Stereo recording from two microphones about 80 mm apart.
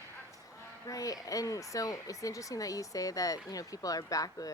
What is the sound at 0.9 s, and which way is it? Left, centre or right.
Speech, left.